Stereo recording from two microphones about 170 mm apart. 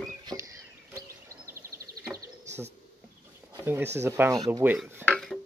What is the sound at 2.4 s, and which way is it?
Bird, 40° right (ahead or behind).